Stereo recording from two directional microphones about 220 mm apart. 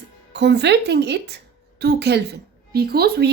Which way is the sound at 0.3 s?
50° right (ahead or behind).